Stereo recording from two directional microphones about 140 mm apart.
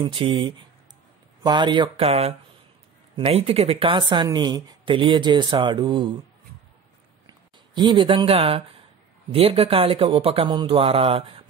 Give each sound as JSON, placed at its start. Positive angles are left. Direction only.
{"t": 0.0, "sound": "speech", "side_deg": -40}
{"t": 7.2, "sound": "speech", "side_deg": -30}